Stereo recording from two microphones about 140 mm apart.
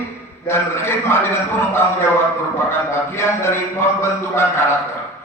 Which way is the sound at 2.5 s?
20° left (ahead or behind).